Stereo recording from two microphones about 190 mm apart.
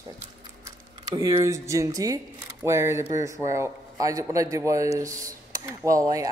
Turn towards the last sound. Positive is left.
turn(degrees=-15)  # may be behind; listen again after turning